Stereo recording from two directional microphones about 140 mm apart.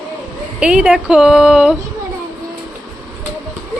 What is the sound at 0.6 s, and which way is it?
Speech, 10° right (ahead or behind).